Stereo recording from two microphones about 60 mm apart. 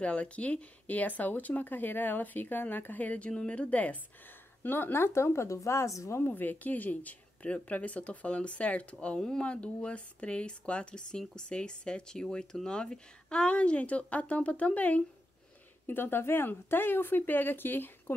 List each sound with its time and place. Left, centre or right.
0.0 s speech: left
4.6 s a woman's voice: left
6.1 s speech: left
15.9 s speech: left